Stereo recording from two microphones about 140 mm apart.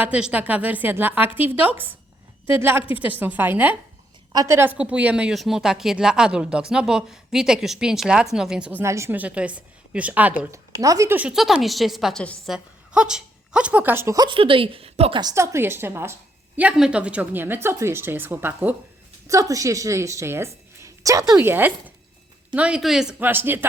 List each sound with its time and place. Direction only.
0.0 s a woman's voice: 10° right (ahead or behind)
8.8 s a woman's voice: 20° right (ahead or behind)
10.4 s speech: 20° right (ahead or behind)
11.2 s speech: 5° right (ahead or behind)
12.5 s speech: 5° right (ahead or behind)
14.3 s a woman's voice: 40° right (ahead or behind)
15.2 s a woman's voice: 25° right (ahead or behind)
16.6 s a woman's voice: 5° right (ahead or behind)
23.3 s a woman's voice: 15° right (ahead or behind)